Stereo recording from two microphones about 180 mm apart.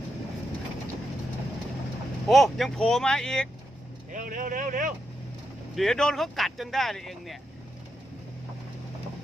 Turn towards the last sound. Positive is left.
turn(degrees=0)  # may be behind; listen again after turning